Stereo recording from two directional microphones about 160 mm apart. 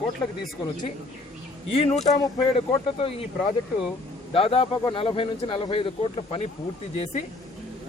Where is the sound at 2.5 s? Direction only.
35° left (ahead or behind).